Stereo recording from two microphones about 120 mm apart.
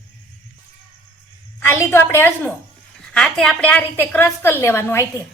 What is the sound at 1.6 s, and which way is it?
Speech, 20° left (ahead or behind).